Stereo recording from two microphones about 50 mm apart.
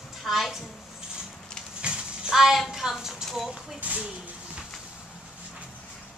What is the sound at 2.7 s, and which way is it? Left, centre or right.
A woman's voice, centre.